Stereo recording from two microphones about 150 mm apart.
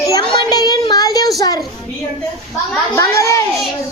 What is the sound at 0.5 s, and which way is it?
Child singing, 25° left (ahead or behind).